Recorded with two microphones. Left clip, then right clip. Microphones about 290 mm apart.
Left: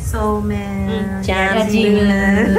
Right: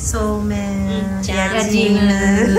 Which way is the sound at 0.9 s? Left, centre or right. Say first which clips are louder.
Left 3 dB; left.